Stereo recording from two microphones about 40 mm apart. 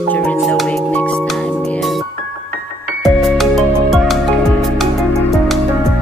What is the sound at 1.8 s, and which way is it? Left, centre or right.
Music, centre.